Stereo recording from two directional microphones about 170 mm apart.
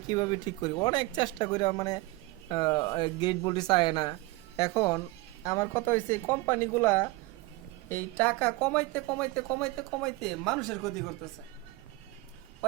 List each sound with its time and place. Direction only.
0.1 s a woman's voice: 25° left (ahead or behind); by 10.9 s centre (ahead or behind)